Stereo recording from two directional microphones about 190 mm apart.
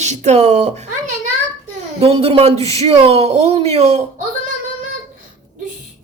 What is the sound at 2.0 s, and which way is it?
Speech, 30° right (ahead or behind).